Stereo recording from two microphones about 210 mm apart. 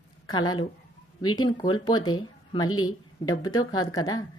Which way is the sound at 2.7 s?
85° left.